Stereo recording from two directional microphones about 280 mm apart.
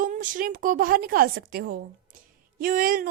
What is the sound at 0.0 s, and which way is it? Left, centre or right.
A woman's voice, right.